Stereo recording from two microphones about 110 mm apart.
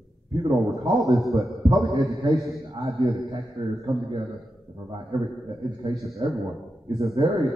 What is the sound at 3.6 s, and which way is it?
Speech, 60° right (ahead or behind).